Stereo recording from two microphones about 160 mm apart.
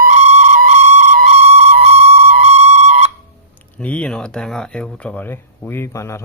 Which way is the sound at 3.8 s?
10° left (ahead or behind).